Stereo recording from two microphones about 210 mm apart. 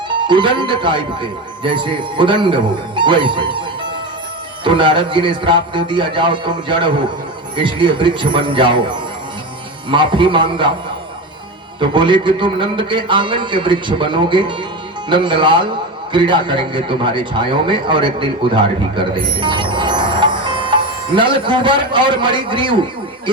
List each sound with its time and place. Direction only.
0.2 s speech: 20° right (ahead or behind)
4.6 s speech: 25° right (ahead or behind)
11.8 s a man's voice: 25° right (ahead or behind)